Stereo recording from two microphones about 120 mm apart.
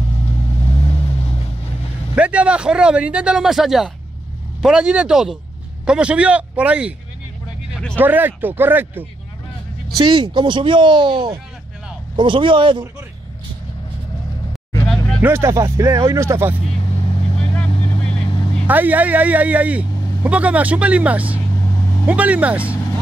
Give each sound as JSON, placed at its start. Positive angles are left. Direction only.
{"t": 0.9, "sound": "vehicle", "side_deg": 50}
{"t": 2.1, "sound": "speech", "side_deg": -10}
{"t": 7.9, "sound": "speech", "side_deg": -15}
{"t": 9.9, "sound": "speech", "side_deg": -40}
{"t": 15.2, "sound": "speech", "side_deg": -20}
{"t": 17.0, "sound": "vehicle", "side_deg": 50}
{"t": 17.6, "sound": "vehicle", "side_deg": 35}
{"t": 18.7, "sound": "speech", "side_deg": -15}
{"t": 21.5, "sound": "vehicle", "side_deg": 30}
{"t": 22.0, "sound": "speech", "side_deg": -10}